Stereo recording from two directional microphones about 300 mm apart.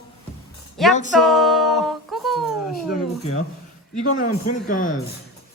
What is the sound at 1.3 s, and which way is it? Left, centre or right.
Music, centre.